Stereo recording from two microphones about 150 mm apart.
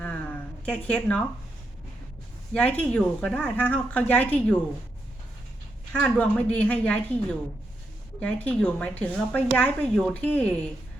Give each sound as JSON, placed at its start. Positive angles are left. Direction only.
{"t": 0.0, "sound": "a sound", "side_deg": 10}
{"t": 2.5, "sound": "a woman's voice", "side_deg": 10}
{"t": 5.9, "sound": "a woman's voice", "side_deg": 10}